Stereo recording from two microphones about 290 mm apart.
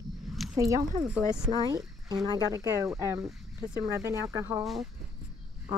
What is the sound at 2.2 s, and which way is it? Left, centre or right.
Speech, centre.